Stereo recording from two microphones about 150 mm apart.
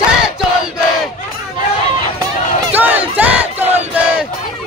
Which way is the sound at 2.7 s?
10° right (ahead or behind).